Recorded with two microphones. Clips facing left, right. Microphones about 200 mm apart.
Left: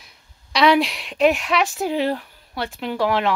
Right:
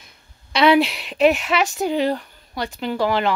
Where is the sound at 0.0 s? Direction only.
Centre (ahead or behind).